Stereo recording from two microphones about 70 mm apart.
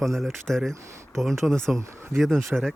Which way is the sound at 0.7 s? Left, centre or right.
Right.